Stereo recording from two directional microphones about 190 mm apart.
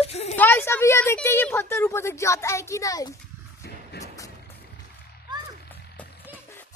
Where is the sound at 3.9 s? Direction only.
60° left (ahead or behind).